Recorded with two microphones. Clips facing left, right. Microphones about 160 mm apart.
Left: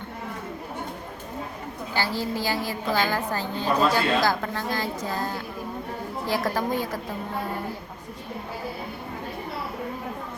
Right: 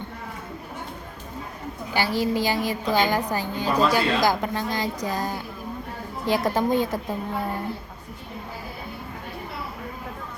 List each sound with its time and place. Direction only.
1.9 s a woman's voice: 15° right (ahead or behind)